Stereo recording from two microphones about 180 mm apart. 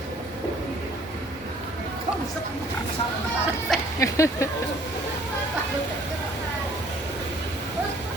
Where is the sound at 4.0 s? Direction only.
15° left (ahead or behind).